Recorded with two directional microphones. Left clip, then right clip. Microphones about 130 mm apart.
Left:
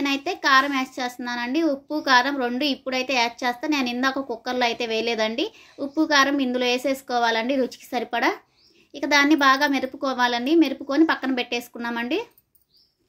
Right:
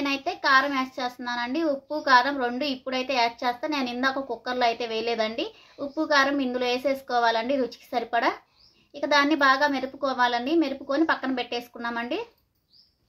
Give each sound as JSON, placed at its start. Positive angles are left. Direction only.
{"t": 0.0, "sound": "a child's voice", "side_deg": 20}